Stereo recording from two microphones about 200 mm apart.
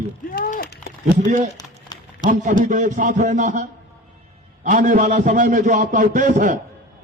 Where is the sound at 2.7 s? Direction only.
40° right (ahead or behind).